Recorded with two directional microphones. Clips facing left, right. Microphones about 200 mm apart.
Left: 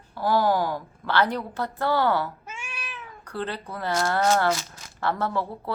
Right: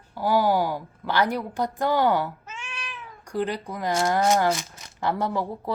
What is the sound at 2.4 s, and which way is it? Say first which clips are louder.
Cat: even; 10° left (ahead or behind).